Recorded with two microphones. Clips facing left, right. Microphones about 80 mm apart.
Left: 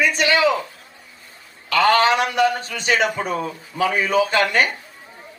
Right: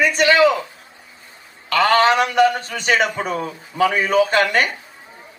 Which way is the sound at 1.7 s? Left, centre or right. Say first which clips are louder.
Right 1 dB; right.